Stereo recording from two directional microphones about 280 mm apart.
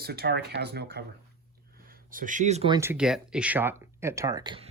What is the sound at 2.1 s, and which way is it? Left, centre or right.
Speech, right.